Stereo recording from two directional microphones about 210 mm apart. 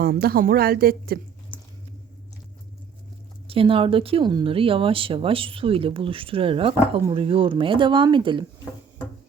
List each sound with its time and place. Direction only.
0.0 s speech: 45° right (ahead or behind)
1.5 s squish: 10° left (ahead or behind)
3.4 s speech: 25° right (ahead or behind)